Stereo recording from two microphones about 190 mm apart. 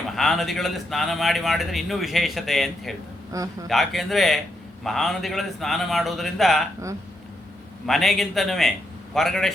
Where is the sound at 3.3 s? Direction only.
15° right (ahead or behind).